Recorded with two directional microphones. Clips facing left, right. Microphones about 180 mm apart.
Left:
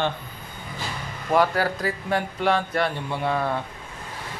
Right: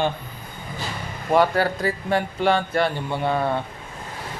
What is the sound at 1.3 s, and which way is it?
Speech, centre (ahead or behind).